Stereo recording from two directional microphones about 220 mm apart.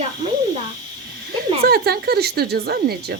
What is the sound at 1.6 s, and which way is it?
Speech, 45° right (ahead or behind).